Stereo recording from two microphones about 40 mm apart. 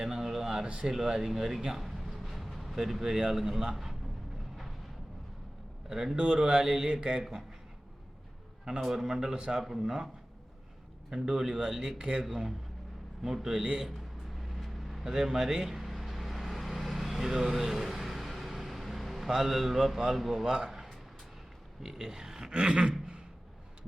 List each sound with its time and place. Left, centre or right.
0.0 s a sound: centre
0.6 s speech: right
0.9 s speech: centre
5.9 s a man's voice: centre
6.8 s speech: right
8.8 s a man's voice: centre
9.0 s a man's voice: right
11.1 s a man's voice: centre
13.9 s a sound: centre
15.0 s vehicle: centre
19.3 s a man's voice: centre
21.8 s a man's voice: centre
22.5 s speech: right